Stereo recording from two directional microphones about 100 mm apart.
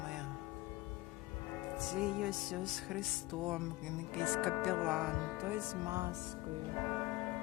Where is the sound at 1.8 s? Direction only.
5° right (ahead or behind).